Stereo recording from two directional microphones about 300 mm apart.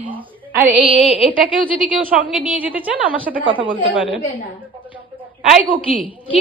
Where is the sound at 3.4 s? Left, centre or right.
Centre.